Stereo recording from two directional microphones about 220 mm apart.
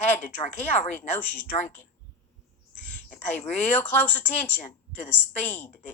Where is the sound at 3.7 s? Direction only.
10° left (ahead or behind).